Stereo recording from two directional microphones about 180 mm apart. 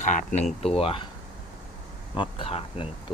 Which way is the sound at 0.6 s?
30° left (ahead or behind).